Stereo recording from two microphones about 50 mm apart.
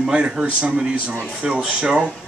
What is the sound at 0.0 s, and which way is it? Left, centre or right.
A man's voice, centre.